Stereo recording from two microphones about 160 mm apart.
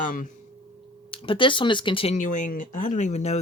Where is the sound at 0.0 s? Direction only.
55° left (ahead or behind).